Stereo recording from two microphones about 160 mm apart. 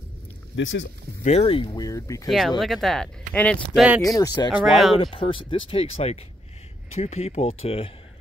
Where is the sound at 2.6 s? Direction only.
Centre (ahead or behind).